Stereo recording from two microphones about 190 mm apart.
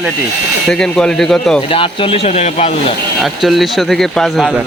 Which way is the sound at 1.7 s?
30° left (ahead or behind).